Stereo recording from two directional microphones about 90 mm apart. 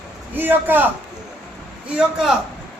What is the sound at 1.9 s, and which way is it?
Speech, 10° right (ahead or behind).